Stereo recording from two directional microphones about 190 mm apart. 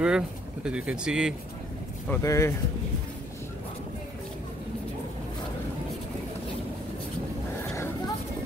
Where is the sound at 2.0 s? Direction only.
15° left (ahead or behind).